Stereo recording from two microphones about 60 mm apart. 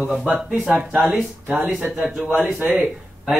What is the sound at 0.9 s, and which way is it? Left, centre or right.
Speech, right.